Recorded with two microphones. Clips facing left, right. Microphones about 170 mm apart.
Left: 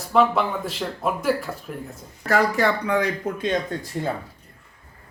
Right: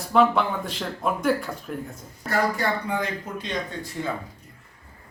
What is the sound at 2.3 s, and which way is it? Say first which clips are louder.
Speech: left 4 dB; 85° left.